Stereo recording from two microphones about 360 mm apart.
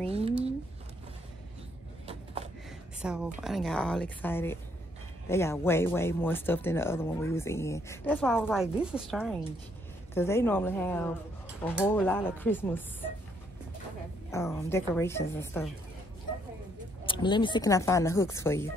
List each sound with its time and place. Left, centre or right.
2.0 s a sound: centre
3.0 s a woman's voice: centre
14.3 s speech: centre
17.0 s speech: centre